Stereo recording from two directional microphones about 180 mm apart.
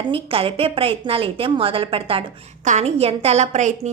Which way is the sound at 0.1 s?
30° right (ahead or behind).